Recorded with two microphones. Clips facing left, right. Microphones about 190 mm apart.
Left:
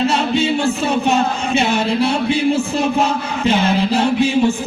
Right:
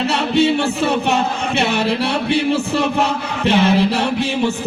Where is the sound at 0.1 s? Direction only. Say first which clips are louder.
Right 1 dB; 65° right (ahead or behind).